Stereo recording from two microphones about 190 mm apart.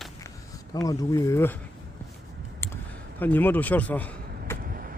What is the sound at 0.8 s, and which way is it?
Speech, 20° left (ahead or behind).